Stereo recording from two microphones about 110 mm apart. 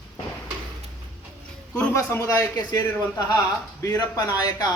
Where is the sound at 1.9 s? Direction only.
25° left (ahead or behind).